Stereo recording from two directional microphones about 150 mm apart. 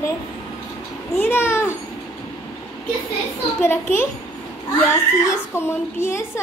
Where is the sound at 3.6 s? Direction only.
15° left (ahead or behind).